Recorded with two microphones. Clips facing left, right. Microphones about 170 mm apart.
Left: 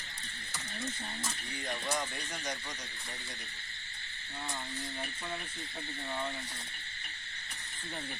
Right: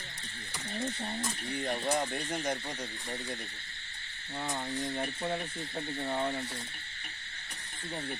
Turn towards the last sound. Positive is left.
turn(degrees=-50)  # may be behind; listen again after turning